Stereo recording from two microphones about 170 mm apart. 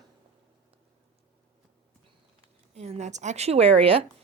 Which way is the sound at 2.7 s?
40° right (ahead or behind).